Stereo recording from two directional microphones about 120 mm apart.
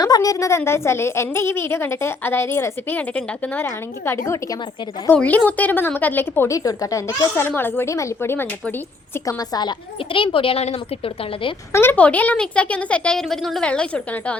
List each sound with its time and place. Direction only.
0.0 s a woman's voice: 30° left (ahead or behind)
6.6 s a woman's voice: 30° left (ahead or behind)
9.1 s a woman's voice: 30° left (ahead or behind); by 11.5 s 50° left (ahead or behind)
11.7 s a woman's voice: 20° left (ahead or behind)